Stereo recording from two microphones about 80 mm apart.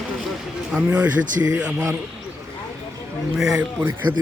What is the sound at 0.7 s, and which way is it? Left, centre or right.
Speech, centre.